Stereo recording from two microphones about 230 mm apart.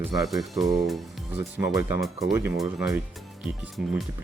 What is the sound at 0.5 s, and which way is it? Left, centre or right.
Speech, centre.